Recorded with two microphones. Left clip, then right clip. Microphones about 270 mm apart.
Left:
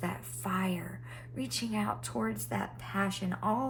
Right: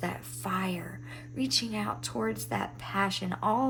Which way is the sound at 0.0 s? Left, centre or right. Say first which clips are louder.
Right 3 dB; centre.